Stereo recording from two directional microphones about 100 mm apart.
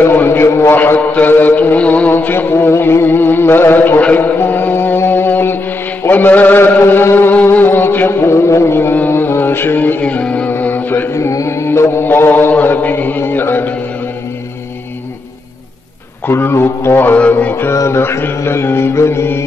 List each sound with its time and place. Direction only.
0.0 s a man's voice: 20° left (ahead or behind)
6.0 s music: 20° left (ahead or behind)
16.3 s music: 25° left (ahead or behind)